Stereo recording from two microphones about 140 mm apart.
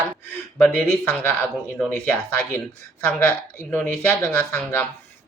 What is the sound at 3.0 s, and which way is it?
Speech, 15° left (ahead or behind).